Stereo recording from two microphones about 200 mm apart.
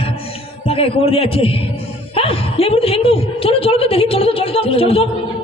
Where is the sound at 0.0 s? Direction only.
30° left (ahead or behind).